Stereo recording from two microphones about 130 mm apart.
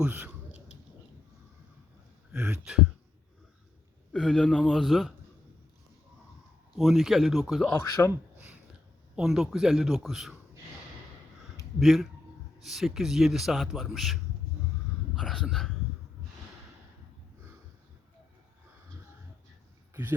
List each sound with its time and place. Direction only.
0.0 s speech: 10° right (ahead or behind)
2.3 s a man's voice: 10° right (ahead or behind)
4.1 s a man's voice: 5° left (ahead or behind)
6.7 s a man's voice: centre (ahead or behind)
7.7 s speech: 20° left (ahead or behind)
8.4 s a sound: 10° right (ahead or behind)
9.1 s a man's voice: 5° right (ahead or behind)
11.8 s a man's voice: centre (ahead or behind)
19.9 s a sound: 15° right (ahead or behind)